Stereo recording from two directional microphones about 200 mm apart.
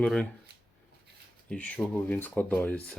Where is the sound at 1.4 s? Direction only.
5° left (ahead or behind).